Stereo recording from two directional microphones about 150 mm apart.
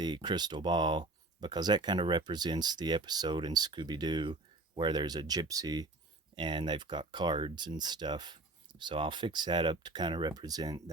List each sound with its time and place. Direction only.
0.0 s speech: 30° right (ahead or behind)